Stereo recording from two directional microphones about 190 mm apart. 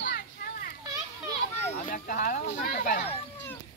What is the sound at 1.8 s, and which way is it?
Speech, 45° left (ahead or behind).